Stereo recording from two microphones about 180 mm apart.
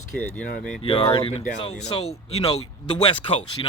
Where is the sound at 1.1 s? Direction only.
30° left (ahead or behind).